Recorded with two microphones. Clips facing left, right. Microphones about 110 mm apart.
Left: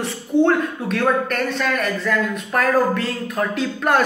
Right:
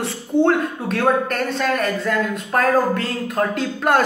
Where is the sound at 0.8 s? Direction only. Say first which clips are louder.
Right 2 dB; 40° right (ahead or behind).